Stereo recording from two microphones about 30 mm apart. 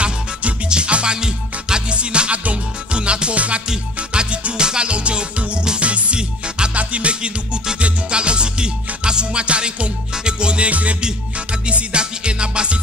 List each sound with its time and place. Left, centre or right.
0.0 s music: right
1.1 s music: right
1.9 s music: right
2.3 s music: right
2.9 s music: right
7.8 s music: right
10.7 s music: right
11.6 s music: right